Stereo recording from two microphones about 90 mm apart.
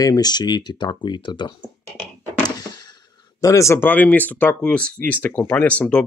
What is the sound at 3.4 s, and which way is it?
Speech, 35° left (ahead or behind).